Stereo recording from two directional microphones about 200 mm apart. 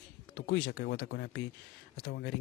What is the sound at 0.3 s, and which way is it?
Speech, 55° left (ahead or behind).